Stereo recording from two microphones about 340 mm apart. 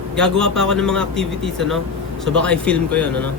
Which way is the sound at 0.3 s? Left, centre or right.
Centre.